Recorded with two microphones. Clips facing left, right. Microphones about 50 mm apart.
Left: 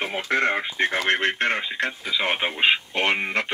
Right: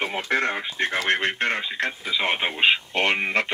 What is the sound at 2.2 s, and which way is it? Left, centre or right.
Speech, centre.